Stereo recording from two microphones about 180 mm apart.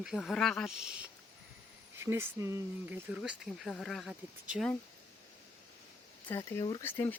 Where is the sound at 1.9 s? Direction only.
15° right (ahead or behind).